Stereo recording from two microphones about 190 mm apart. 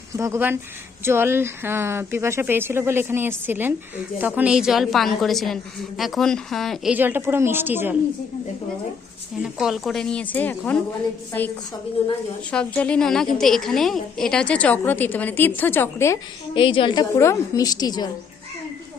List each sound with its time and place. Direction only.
0.1 s a woman's voice: 15° right (ahead or behind)
9.4 s a woman's voice: 5° right (ahead or behind); by 16.1 s 10° left (ahead or behind)
16.6 s a woman's voice: 25° left (ahead or behind)